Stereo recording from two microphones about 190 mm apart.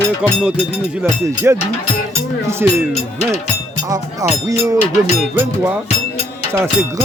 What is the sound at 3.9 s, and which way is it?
Speech, 15° right (ahead or behind).